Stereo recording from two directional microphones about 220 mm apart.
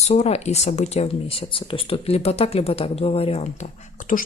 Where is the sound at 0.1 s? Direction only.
30° left (ahead or behind).